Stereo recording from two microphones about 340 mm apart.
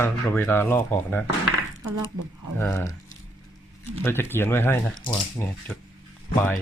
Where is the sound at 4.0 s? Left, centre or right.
Centre.